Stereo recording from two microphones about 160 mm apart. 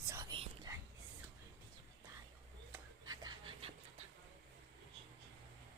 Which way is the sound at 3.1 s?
30° right (ahead or behind).